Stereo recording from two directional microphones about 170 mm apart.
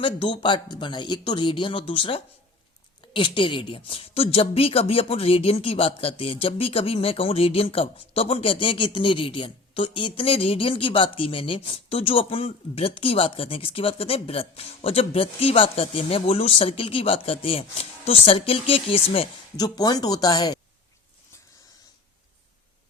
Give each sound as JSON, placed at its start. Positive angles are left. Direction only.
{"t": 0.0, "sound": "a woman's voice", "side_deg": 30}